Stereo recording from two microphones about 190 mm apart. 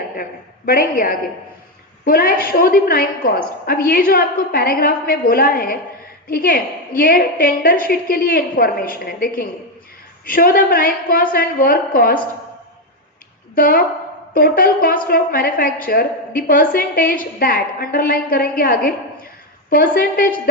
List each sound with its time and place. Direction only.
0.2 s a woman's voice: 50° left (ahead or behind)
13.6 s a woman's voice: 50° left (ahead or behind)